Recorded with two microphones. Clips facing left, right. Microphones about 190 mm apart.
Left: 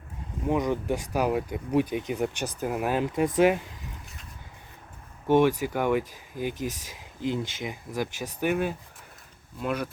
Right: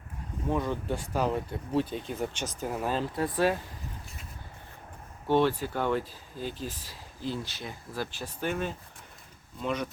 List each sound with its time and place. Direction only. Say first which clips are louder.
0.4 s speech: left 4 dB; 15° left (ahead or behind)
5.3 s speech: left 4 dB; 15° left (ahead or behind)